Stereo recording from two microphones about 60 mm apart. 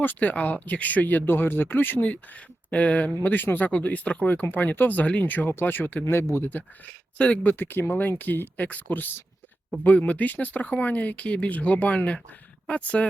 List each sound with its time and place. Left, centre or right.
0.0 s speech: left
6.1 s speech: left
7.2 s speech: centre
7.5 s speech: left